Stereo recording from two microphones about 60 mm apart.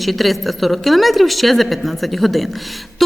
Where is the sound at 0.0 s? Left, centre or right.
Centre.